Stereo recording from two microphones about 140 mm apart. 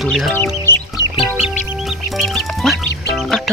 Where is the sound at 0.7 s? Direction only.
15° left (ahead or behind).